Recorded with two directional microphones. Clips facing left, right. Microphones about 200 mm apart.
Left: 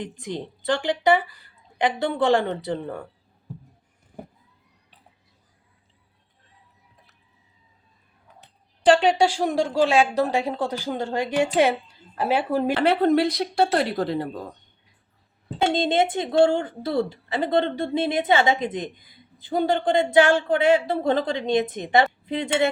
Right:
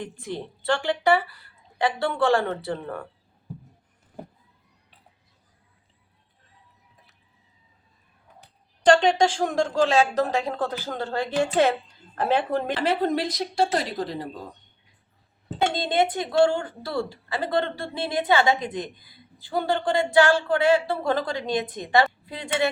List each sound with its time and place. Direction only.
0.0 s speech: 15° left (ahead or behind)
8.8 s speech: 5° left (ahead or behind)
12.7 s a woman's voice: 60° left (ahead or behind)
15.7 s a woman's voice: 25° left (ahead or behind)